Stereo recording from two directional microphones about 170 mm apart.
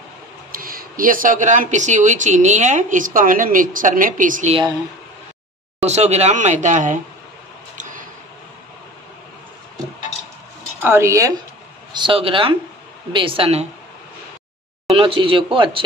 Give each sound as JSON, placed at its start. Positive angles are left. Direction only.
{"t": 0.5, "sound": "speech", "side_deg": -55}
{"t": 5.9, "sound": "speech", "side_deg": -40}
{"t": 10.8, "sound": "speech", "side_deg": -15}
{"t": 11.9, "sound": "speech", "side_deg": -30}
{"t": 14.9, "sound": "speech", "side_deg": -35}